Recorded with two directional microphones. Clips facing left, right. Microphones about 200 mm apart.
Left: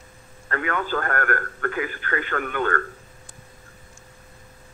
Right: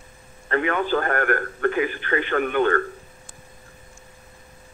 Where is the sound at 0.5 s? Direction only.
20° right (ahead or behind).